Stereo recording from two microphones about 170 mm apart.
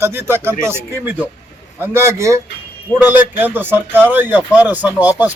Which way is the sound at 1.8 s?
15° right (ahead or behind).